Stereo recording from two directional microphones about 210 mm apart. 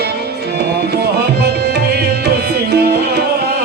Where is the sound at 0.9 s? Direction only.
50° right (ahead or behind).